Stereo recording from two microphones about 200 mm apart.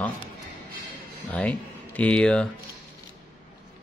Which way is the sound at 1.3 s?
5° left (ahead or behind).